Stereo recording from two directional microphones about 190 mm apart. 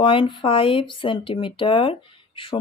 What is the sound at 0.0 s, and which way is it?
Speech, 25° left (ahead or behind).